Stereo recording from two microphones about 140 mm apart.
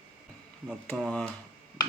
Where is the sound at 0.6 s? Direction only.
5° left (ahead or behind).